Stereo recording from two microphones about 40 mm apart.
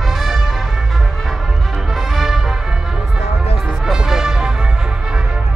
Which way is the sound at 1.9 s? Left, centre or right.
Centre.